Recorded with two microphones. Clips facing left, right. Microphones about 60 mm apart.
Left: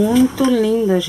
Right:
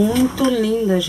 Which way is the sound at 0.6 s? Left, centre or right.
Centre.